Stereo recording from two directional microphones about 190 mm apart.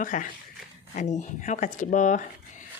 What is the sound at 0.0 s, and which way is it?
Speech, 45° left (ahead or behind).